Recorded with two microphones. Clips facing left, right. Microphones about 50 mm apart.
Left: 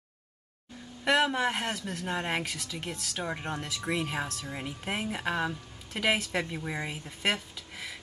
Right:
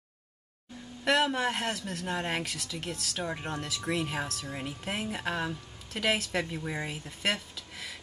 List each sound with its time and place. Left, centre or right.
1.0 s speech: centre
3.3 s speech: centre